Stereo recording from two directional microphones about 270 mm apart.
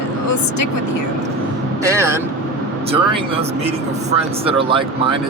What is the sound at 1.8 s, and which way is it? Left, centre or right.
Speech, centre.